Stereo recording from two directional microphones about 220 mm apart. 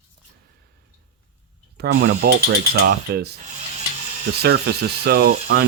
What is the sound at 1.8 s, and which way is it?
Speech, 50° right (ahead or behind).